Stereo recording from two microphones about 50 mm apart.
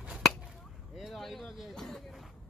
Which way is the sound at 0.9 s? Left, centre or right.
Centre.